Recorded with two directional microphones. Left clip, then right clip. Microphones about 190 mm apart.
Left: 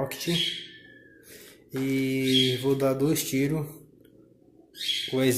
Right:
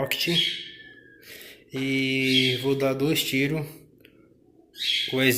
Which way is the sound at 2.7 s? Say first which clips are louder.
Right 1 dB; 15° left (ahead or behind).